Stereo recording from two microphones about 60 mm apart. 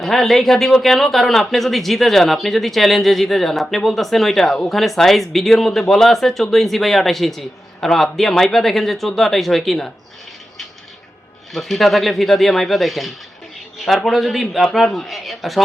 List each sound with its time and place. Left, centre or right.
0.0 s speech: centre
11.5 s speech: centre